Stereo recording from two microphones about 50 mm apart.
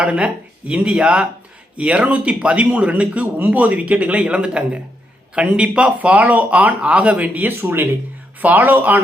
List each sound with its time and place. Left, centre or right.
0.0 s speech: right
8.4 s speech: right